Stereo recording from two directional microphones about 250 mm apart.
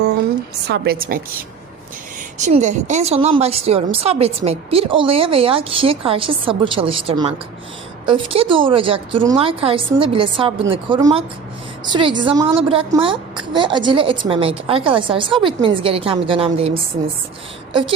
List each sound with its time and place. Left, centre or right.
0.7 s a woman's voice: right